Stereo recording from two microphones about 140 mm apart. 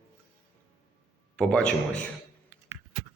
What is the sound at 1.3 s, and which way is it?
Speech, 5° left (ahead or behind).